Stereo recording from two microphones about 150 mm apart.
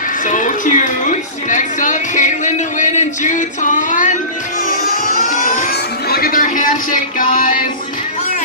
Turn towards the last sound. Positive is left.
turn(degrees=65)  # may be behind; listen again after turning